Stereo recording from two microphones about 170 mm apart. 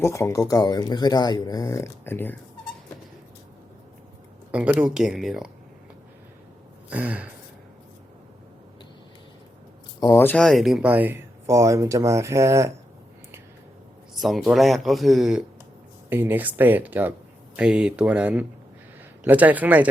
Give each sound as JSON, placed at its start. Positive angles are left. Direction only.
{"t": 0.0, "sound": "speech", "side_deg": 15}
{"t": 4.5, "sound": "speech", "side_deg": -10}
{"t": 6.9, "sound": "speech", "side_deg": -10}
{"t": 10.0, "sound": "speech", "side_deg": 15}
{"t": 14.2, "sound": "speech", "side_deg": 0}